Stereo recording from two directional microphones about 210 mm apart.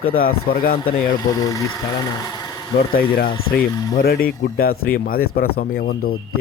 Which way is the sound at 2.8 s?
45° left (ahead or behind).